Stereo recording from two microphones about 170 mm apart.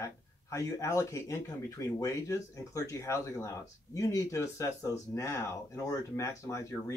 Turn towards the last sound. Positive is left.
turn(degrees=15)  # may be behind; listen again after turning